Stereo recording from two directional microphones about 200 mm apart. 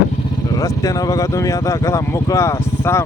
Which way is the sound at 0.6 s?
15° left (ahead or behind).